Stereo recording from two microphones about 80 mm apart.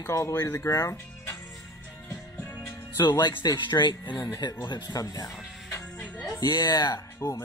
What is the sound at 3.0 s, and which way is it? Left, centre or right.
Speech, left.